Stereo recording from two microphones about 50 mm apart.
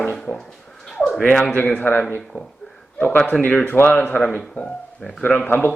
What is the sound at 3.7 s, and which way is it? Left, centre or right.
Speech, left.